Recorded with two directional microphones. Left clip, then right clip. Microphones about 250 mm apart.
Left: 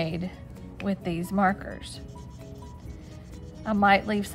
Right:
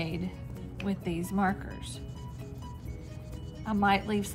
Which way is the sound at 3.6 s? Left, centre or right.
Left.